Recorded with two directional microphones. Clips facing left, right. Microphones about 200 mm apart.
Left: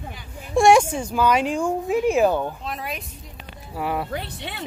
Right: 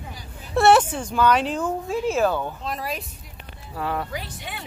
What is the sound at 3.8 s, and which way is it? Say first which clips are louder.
Speech: left 2 dB; 15° left (ahead or behind).